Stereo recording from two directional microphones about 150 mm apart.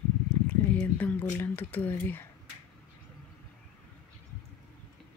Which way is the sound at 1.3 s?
15° left (ahead or behind).